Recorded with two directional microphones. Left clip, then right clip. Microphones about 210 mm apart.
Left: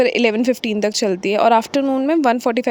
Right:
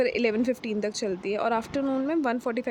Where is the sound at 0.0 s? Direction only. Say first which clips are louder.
Left 9 dB; 40° left (ahead or behind).